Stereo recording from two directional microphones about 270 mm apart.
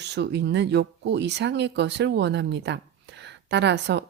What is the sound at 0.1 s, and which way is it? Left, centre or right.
Speech, right.